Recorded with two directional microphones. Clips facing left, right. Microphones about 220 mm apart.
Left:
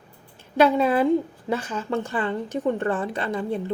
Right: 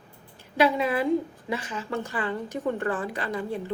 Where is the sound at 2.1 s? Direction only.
25° left (ahead or behind).